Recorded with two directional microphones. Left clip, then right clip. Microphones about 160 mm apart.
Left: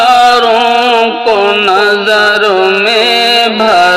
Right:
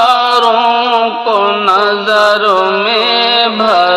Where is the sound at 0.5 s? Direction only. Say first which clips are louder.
Left 2 dB; 10° left (ahead or behind).